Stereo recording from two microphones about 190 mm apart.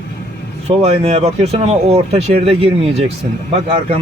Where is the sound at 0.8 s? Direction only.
35° right (ahead or behind).